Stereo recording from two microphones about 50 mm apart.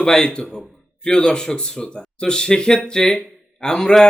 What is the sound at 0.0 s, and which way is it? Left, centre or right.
Speech, centre.